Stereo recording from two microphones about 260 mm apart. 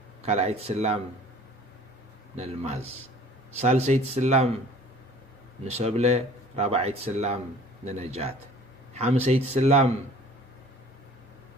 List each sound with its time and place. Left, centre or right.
0.2 s speech: right
2.3 s speech: right
5.6 s speech: right